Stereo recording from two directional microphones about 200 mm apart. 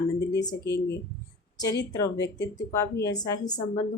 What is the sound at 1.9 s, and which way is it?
A woman's voice, 15° left (ahead or behind).